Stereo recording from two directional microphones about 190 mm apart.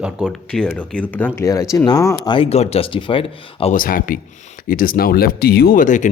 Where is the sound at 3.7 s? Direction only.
45° left (ahead or behind).